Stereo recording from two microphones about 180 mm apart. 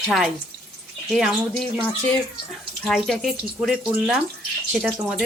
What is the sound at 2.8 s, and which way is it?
Speech, centre (ahead or behind).